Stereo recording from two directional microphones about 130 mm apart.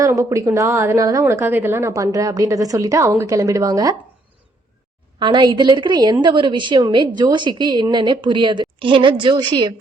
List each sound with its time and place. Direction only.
0.0 s a woman's voice: 25° right (ahead or behind)
5.2 s a woman's voice: 35° right (ahead or behind)